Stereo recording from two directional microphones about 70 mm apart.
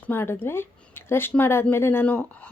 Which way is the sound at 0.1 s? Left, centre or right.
Left.